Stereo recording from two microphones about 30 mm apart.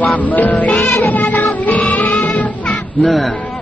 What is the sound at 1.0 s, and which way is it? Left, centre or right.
Music, left.